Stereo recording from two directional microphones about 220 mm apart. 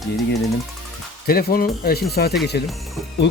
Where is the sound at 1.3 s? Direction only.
45° left (ahead or behind).